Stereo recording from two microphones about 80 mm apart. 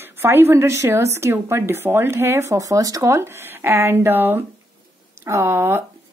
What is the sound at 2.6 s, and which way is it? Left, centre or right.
A woman's voice, right.